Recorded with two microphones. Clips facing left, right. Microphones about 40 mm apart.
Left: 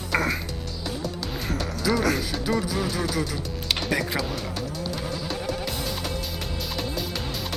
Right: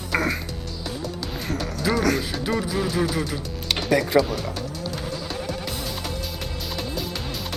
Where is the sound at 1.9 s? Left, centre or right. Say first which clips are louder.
Right 2 dB; centre.